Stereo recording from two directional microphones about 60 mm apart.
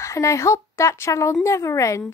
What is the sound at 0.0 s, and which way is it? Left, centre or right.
Speech, left.